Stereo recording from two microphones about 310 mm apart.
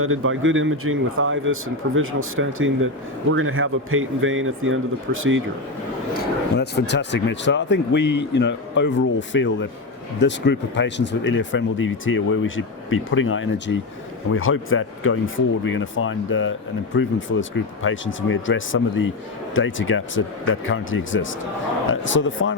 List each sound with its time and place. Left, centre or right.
0.0 s speech: right
6.6 s speech: left